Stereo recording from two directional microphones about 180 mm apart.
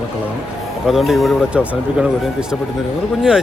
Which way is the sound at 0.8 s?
Centre (ahead or behind).